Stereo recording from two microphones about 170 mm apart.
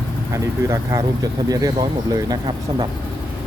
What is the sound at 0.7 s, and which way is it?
Speech, 20° right (ahead or behind).